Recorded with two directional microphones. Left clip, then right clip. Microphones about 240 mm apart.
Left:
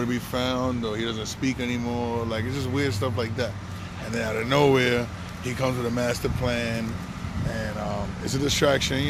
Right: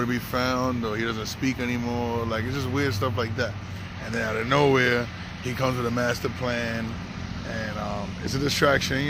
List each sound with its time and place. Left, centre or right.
0.0 s speech: centre
8.4 s speech: centre